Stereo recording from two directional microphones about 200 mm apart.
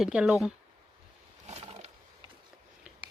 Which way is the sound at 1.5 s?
30° right (ahead or behind).